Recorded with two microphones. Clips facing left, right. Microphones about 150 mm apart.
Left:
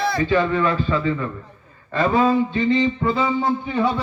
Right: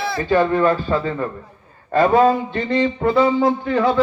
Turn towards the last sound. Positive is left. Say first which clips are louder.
# right 4 dB
turn(degrees=-80)